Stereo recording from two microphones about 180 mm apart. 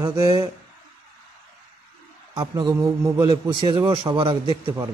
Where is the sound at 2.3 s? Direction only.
20° right (ahead or behind).